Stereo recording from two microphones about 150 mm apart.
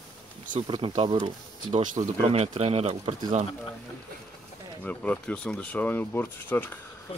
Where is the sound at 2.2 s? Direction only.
40° right (ahead or behind).